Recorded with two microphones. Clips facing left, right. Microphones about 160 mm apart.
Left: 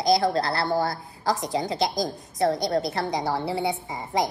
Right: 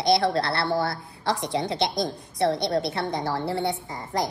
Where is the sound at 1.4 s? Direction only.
Centre (ahead or behind).